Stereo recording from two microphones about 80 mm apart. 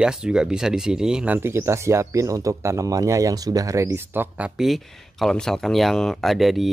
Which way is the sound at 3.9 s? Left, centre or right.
Right.